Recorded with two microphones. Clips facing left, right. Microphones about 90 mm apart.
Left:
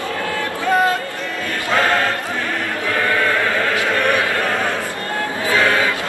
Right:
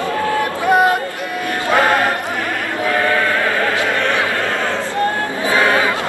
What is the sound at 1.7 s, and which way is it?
Choir, 15° right (ahead or behind).